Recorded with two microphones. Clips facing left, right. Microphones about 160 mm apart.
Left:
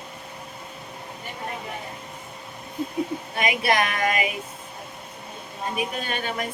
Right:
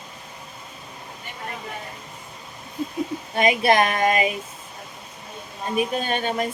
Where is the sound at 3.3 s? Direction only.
30° right (ahead or behind).